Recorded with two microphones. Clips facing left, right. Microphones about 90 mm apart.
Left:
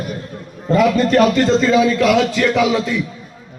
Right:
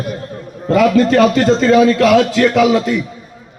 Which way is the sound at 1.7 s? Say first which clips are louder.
Right 4 dB; 65° right (ahead or behind).